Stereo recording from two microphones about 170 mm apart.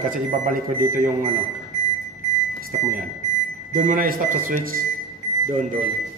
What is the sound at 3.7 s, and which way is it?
Speech, 50° right (ahead or behind).